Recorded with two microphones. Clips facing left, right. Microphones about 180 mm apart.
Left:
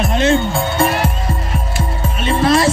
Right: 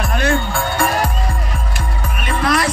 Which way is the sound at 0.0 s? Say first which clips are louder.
Left 4 dB; 20° left (ahead or behind).